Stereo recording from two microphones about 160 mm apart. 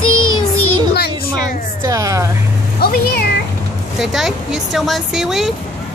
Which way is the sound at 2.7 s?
75° left (ahead or behind).